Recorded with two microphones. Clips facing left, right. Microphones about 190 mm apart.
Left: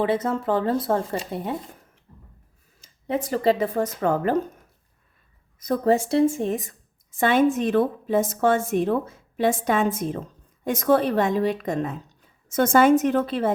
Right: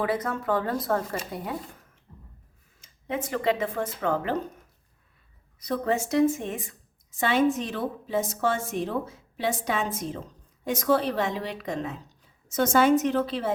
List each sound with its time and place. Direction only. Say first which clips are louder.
0.0 s speech: left 5 dB; 25° left (ahead or behind)
2.8 s speech: left 5 dB; 35° left (ahead or behind)
5.5 s a woman's voice: left 6 dB; 45° left (ahead or behind)